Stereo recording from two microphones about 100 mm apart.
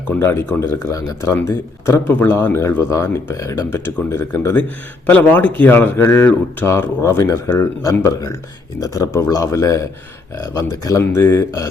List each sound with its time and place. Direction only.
0.1 s speech: 25° left (ahead or behind)